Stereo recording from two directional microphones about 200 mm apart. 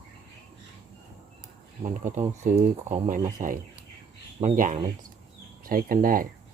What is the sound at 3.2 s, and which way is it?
Speech, 20° right (ahead or behind).